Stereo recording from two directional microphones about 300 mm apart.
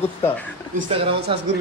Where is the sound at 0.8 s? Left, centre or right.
Centre.